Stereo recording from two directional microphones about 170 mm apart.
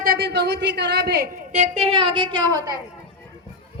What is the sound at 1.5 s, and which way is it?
Speech, 40° right (ahead or behind).